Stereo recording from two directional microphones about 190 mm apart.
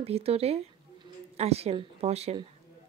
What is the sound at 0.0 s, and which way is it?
A woman's voice, 30° right (ahead or behind).